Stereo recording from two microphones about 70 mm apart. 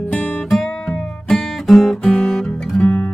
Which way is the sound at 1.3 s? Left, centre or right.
Centre.